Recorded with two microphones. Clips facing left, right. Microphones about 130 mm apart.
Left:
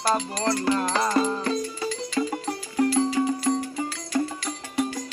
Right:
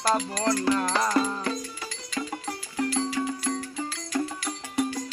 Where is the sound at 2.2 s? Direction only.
25° left (ahead or behind).